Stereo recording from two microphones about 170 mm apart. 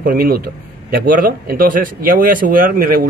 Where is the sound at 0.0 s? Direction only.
60° right (ahead or behind).